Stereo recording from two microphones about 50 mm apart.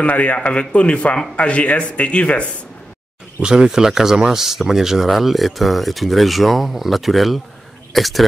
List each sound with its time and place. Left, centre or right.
0.0 s a man's voice: left
3.4 s speech: centre